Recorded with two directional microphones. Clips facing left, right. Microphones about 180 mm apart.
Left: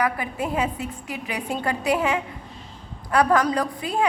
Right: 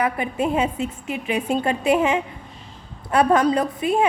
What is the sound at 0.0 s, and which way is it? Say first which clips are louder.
A woman's voice: right 3 dB; 25° right (ahead or behind).